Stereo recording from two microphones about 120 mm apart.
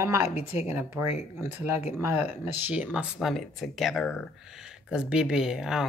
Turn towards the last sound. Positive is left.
turn(degrees=-5)  # may be behind; listen again after turning